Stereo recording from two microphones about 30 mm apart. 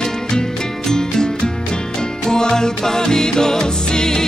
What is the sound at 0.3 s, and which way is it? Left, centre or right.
Music, left.